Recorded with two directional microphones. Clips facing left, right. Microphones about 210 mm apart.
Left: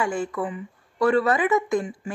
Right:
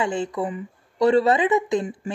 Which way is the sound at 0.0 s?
20° right (ahead or behind).